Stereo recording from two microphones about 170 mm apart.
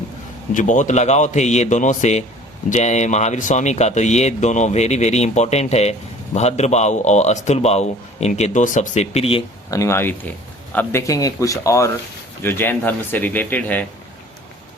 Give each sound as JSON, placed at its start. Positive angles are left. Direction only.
{"t": 0.5, "sound": "a man's voice", "side_deg": 50}
{"t": 9.6, "sound": "a man's voice", "side_deg": 20}